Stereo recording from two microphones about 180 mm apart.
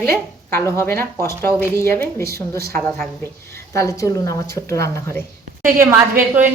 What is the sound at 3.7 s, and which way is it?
A woman's voice, 15° left (ahead or behind).